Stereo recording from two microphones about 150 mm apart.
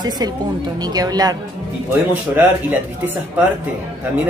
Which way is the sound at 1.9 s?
15° right (ahead or behind).